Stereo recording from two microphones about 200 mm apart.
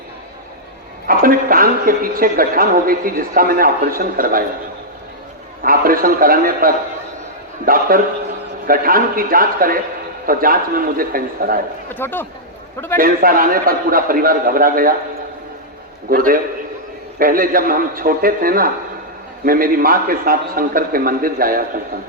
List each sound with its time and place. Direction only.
1.0 s a woman's voice: 45° right (ahead or behind)
5.6 s a woman's voice: 45° right (ahead or behind)
11.9 s speech: 10° left (ahead or behind)
13.0 s a woman's voice: 45° right (ahead or behind)
16.0 s a woman's voice: 45° right (ahead or behind)